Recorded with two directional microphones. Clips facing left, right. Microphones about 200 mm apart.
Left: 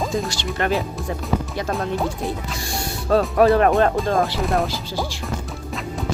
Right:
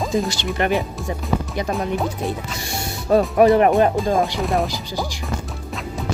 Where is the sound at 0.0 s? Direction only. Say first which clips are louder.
Right 2 dB; centre (ahead or behind).